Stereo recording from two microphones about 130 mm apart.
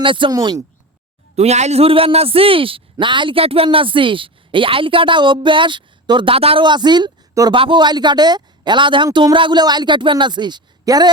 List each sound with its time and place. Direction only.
0.0 s a man's voice: 40° right (ahead or behind)
0.3 s speech: 30° right (ahead or behind)
1.4 s a man's voice: 60° right (ahead or behind); by 11.1 s 30° right (ahead or behind)